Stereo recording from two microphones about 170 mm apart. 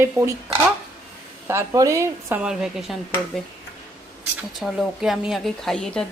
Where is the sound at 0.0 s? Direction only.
15° right (ahead or behind).